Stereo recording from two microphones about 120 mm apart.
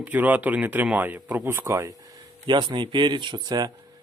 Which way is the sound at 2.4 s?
40° right (ahead or behind).